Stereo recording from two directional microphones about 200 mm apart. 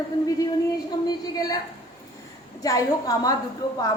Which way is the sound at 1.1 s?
20° left (ahead or behind).